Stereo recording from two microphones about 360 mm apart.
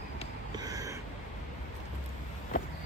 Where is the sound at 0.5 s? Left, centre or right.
Centre.